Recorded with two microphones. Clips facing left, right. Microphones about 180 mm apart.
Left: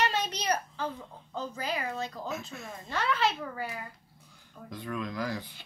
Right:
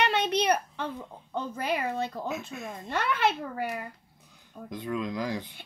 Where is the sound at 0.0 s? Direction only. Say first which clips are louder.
Right 5 dB; 60° right (ahead or behind).